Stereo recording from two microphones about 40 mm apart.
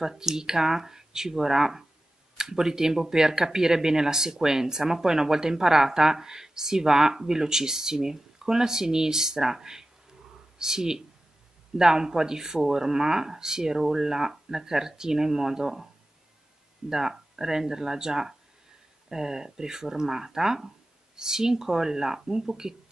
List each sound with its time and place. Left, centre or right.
0.0 s speech: centre
16.9 s speech: centre